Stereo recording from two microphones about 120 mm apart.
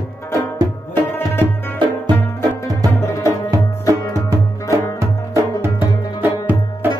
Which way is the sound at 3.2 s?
30° right (ahead or behind).